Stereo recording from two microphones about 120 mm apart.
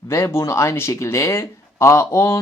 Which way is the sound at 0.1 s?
25° left (ahead or behind).